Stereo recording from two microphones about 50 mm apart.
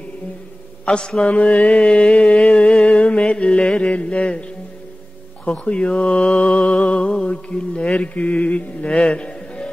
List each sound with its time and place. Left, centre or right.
0.8 s mantra: centre
2.8 s music: left
5.4 s mantra: left
6.6 s music: centre
6.9 s mantra: left